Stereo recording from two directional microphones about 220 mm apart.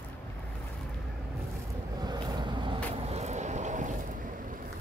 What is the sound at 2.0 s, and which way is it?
Vehicle, 20° right (ahead or behind).